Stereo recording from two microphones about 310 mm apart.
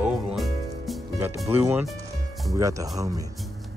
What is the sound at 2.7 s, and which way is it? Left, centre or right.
Speech, centre.